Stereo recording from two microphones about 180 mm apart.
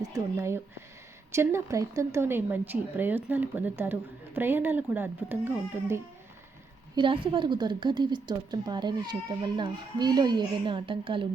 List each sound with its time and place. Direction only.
0.0 s speech: 15° right (ahead or behind)
6.9 s a woman's voice: 30° right (ahead or behind)